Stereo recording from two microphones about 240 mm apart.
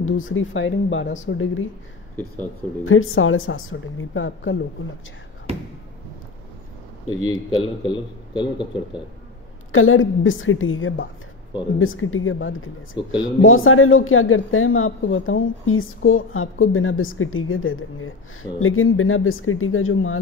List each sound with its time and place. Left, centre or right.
0.0 s speech: left
2.8 s speech: left
7.2 s a man's voice: left
9.7 s speech: left